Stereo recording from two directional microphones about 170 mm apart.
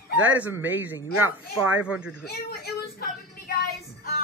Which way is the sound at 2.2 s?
65° left (ahead or behind).